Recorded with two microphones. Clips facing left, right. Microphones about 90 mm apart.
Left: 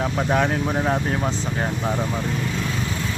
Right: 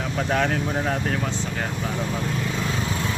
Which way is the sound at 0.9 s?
25° left (ahead or behind).